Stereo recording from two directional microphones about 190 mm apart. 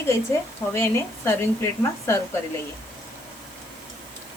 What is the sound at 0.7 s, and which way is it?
Speech, 15° left (ahead or behind).